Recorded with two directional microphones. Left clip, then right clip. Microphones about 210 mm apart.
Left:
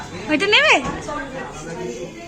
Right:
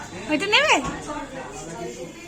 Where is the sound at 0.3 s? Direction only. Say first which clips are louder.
Left 4 dB; 10° right (ahead or behind).